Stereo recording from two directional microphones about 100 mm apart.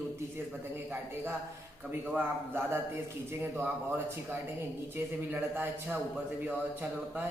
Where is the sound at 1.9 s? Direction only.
20° right (ahead or behind).